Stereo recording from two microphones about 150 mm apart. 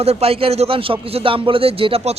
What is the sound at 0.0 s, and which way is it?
Speech, 45° right (ahead or behind).